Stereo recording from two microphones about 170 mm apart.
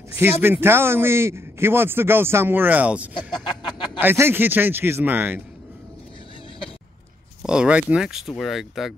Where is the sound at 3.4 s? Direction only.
25° left (ahead or behind).